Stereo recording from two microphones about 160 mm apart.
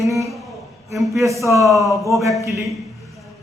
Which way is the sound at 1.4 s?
20° right (ahead or behind).